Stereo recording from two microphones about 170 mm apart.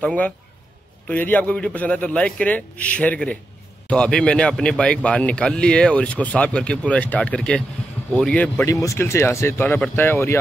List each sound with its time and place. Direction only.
0.0 s a man's voice: 10° left (ahead or behind)
8.6 s a man's voice: 20° left (ahead or behind)